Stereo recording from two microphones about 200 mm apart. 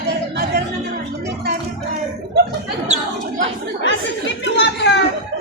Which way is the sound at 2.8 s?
35° right (ahead or behind).